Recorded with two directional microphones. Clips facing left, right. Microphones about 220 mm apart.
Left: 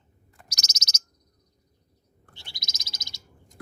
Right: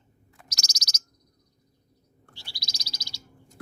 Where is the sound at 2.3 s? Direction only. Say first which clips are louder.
Right 1 dB; 20° left (ahead or behind).